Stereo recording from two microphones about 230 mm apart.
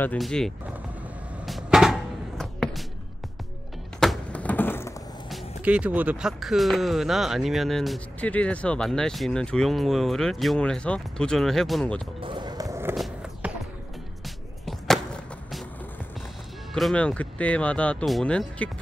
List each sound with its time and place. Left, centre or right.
0.0 s speech: centre
1.4 s a sound: centre
4.0 s a sound: centre
5.6 s speech: centre
12.2 s basketball bounce: right
12.9 s skateboard: centre
14.2 s music: centre
16.7 s speech: centre